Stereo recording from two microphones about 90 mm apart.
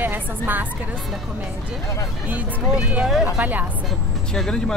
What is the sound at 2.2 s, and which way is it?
Speech, 15° right (ahead or behind).